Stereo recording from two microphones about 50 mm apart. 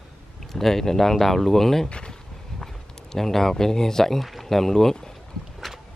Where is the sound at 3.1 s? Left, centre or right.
Centre.